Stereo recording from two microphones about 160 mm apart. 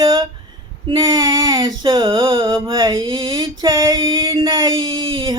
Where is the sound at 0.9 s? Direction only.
30° right (ahead or behind).